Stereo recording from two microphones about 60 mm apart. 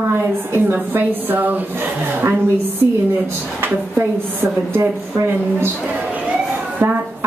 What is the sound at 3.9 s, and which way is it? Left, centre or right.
A woman's voice, right.